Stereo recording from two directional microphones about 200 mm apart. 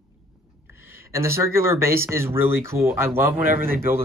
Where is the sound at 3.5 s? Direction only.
45° right (ahead or behind).